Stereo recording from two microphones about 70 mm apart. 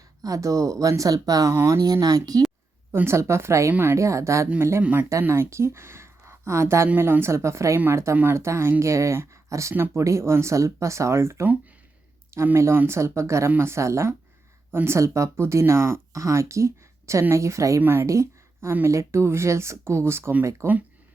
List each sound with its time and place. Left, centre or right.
0.2 s speech: right
1.5 s speech: right
1.8 s speech: right
2.9 s speech: right
3.7 s speech: right
3.9 s speech: right
4.8 s speech: right
5.2 s speech: right
6.8 s speech: right
9.7 s speech: right
10.0 s speech: right
12.5 s speech: right
17.7 s speech: right
18.0 s speech: right